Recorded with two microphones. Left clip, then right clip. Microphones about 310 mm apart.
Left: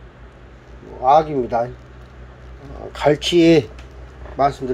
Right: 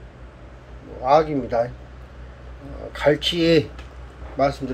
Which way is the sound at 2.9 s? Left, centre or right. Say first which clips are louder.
Left 3 dB; centre.